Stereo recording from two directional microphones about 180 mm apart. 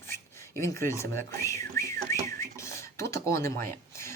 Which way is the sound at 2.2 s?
15° left (ahead or behind).